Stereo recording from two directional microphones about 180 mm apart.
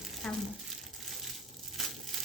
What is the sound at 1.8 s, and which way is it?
Crumpling, centre (ahead or behind).